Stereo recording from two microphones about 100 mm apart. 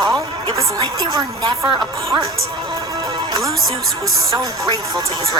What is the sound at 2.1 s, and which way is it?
Speech, 35° right (ahead or behind).